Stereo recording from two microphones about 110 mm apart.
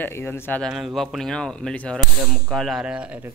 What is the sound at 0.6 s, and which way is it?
Speech, centre (ahead or behind).